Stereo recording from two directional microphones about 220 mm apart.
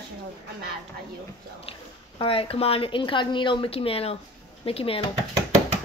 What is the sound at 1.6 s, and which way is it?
A woman's voice, 25° left (ahead or behind).